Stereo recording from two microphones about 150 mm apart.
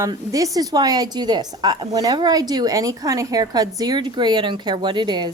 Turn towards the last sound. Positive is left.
turn(degrees=-30)  # may be behind; listen again after turning